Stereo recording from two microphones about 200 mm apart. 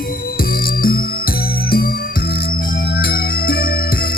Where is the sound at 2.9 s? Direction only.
50° left (ahead or behind).